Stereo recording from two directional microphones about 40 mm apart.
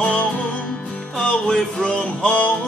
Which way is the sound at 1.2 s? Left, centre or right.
Centre.